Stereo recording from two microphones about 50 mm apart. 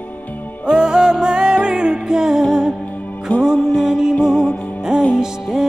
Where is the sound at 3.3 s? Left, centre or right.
Left.